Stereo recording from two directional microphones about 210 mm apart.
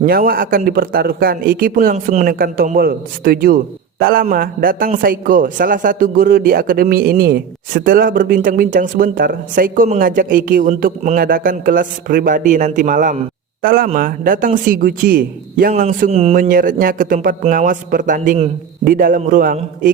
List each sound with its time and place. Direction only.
0.0 s a man's voice: 45° right (ahead or behind)